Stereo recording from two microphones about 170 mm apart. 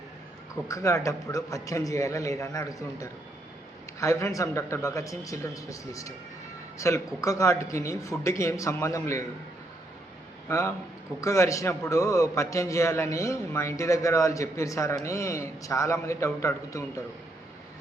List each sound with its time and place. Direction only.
0.7 s a man's voice: 20° left (ahead or behind)
10.5 s a man's voice: 15° left (ahead or behind)